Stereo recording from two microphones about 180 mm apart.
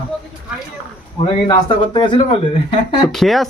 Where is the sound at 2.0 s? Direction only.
25° left (ahead or behind).